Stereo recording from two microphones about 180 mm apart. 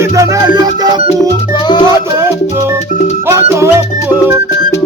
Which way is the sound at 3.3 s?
15° right (ahead or behind).